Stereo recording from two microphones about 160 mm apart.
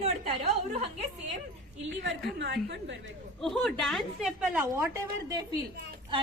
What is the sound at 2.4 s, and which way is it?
Speech, 90° right.